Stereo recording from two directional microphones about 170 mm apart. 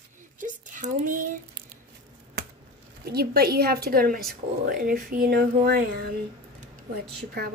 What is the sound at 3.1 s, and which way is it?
Speech, 65° right (ahead or behind).